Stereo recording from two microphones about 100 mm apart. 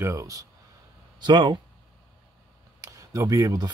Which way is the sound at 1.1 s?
50° right (ahead or behind).